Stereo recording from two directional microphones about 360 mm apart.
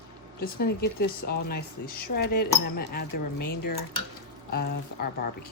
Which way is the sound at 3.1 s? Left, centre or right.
Left.